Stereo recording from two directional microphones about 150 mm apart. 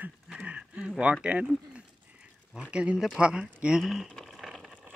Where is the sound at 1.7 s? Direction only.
5° right (ahead or behind).